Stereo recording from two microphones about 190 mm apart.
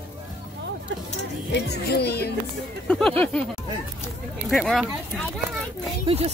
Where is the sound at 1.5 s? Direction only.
60° left (ahead or behind).